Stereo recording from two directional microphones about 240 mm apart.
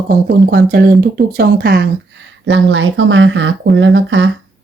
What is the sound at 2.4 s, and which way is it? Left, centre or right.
Speech, right.